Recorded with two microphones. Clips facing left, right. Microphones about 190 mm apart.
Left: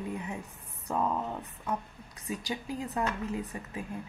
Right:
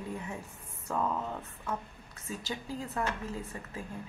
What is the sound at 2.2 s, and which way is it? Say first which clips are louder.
A woman's voice: left 3 dB; 15° left (ahead or behind).